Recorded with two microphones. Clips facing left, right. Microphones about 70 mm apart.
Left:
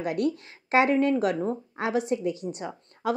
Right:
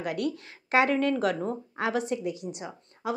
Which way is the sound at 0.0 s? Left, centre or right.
Left.